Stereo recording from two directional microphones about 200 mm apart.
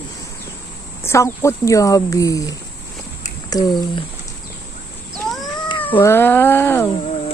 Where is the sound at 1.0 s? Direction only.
15° left (ahead or behind).